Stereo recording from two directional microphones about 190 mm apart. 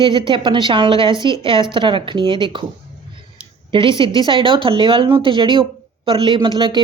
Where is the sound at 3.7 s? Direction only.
25° right (ahead or behind).